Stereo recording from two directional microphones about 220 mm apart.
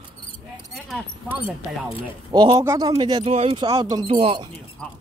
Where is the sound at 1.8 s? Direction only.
20° right (ahead or behind).